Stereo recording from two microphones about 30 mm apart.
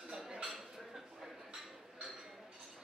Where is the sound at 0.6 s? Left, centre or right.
Centre.